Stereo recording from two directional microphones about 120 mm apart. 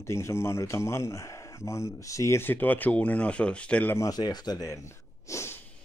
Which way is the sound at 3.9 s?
30° left (ahead or behind).